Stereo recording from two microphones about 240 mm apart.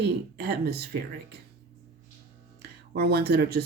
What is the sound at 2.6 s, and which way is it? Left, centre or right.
Speech, right.